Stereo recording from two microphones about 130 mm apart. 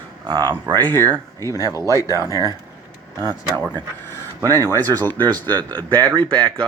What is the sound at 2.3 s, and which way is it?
Speech, 30° left (ahead or behind).